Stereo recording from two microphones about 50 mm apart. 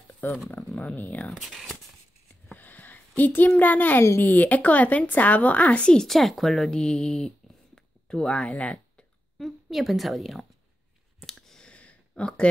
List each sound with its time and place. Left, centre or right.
0.2 s speech: left
2.5 s a sound: left
4.2 s speech: left; by 6.0 s centre
6.0 s speech: centre; by 9.0 s left
9.4 s a woman's voice: centre
11.2 s clicking: centre
11.6 s a sound: left